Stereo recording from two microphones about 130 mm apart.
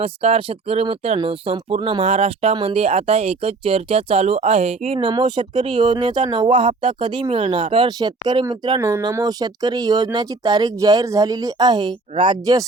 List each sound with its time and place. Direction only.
0.0 s speech: 45° right (ahead or behind)
5.0 s speech: 35° right (ahead or behind)
8.8 s speech: 20° right (ahead or behind)
9.1 s speech: 30° right (ahead or behind)